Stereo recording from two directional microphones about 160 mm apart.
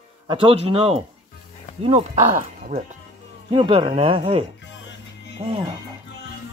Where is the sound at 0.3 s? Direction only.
35° right (ahead or behind); by 2.8 s 50° right (ahead or behind).